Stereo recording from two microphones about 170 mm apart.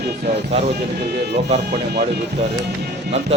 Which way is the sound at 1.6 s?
70° right (ahead or behind).